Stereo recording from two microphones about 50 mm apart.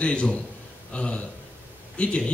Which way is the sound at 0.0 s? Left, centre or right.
Left.